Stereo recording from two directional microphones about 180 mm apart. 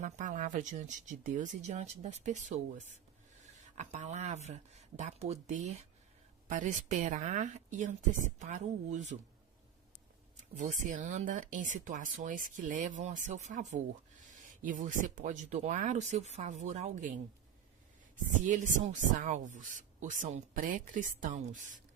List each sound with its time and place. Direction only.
0.0 s speech: 45° right (ahead or behind)
10.6 s speech: 45° right (ahead or behind)
18.4 s speech: 45° right (ahead or behind)